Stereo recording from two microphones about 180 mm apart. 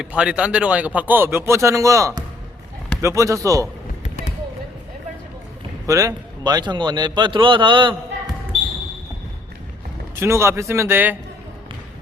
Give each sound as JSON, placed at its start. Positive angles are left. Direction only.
{"t": 0.0, "sound": "speech", "side_deg": -5}
{"t": 5.8, "sound": "a man's voice", "side_deg": -15}
{"t": 10.2, "sound": "speech", "side_deg": -15}